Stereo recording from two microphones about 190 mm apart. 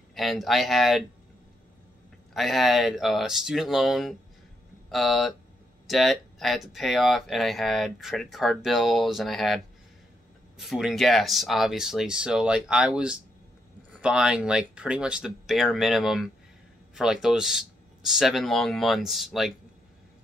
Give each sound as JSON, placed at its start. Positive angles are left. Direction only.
{"t": 0.1, "sound": "speech", "side_deg": 0}
{"t": 2.3, "sound": "speech", "side_deg": 0}
{"t": 10.6, "sound": "speech", "side_deg": 0}